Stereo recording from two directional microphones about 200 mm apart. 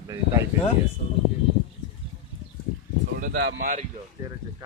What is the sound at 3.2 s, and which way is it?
Speech, 55° right (ahead or behind).